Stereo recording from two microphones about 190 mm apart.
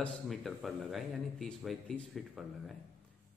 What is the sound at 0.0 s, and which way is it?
Speech, centre (ahead or behind).